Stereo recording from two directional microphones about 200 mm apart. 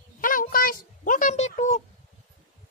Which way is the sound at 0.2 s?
45° left (ahead or behind).